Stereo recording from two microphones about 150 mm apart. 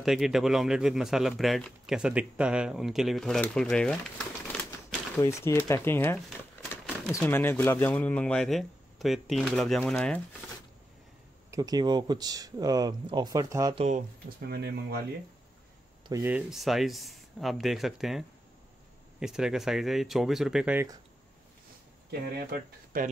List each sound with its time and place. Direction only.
0.0 s speech: centre (ahead or behind)
5.1 s speech: 20° left (ahead or behind)
7.2 s speech: 15° left (ahead or behind)
11.5 s speech: 25° right (ahead or behind)
14.5 s speech: 90° right
16.1 s speech: 15° right (ahead or behind)
22.2 s speech: 90° right